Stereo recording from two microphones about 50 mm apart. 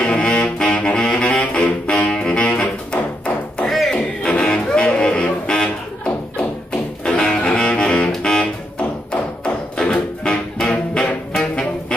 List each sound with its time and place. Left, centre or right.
0.0 s saxophone: left
3.6 s a sound: centre
3.9 s music: centre
9.1 s thump: centre
10.6 s music: centre